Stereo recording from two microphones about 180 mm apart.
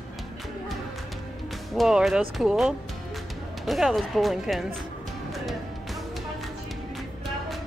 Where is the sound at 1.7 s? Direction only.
Centre (ahead or behind).